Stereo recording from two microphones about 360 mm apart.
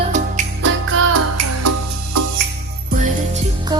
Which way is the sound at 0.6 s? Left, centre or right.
Right.